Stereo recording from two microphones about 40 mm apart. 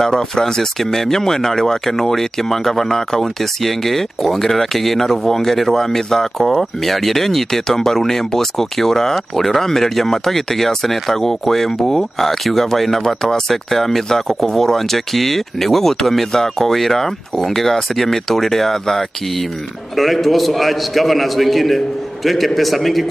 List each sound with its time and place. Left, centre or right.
0.0 s a man's voice: centre